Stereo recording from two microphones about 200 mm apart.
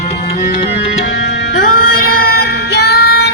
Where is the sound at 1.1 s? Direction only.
60° left (ahead or behind).